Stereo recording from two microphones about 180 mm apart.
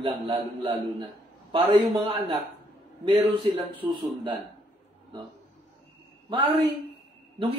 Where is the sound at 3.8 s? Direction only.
25° right (ahead or behind).